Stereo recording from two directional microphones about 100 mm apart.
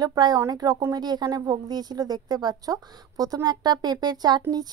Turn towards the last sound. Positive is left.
turn(degrees=-45)  # may be behind; listen again after turning